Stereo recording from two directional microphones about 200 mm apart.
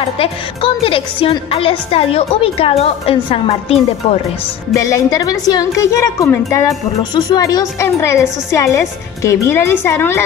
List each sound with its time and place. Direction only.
0.2 s a woman's voice: 25° left (ahead or behind)
4.7 s a woman's voice: 15° left (ahead or behind)